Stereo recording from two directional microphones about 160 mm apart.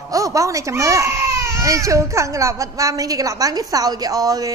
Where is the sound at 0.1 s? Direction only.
20° right (ahead or behind).